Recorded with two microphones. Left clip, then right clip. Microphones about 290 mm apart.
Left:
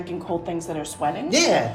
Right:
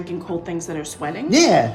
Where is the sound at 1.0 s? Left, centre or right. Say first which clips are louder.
Left 4 dB; centre.